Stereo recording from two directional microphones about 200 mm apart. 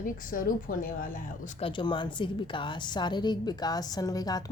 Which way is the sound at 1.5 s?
25° left (ahead or behind).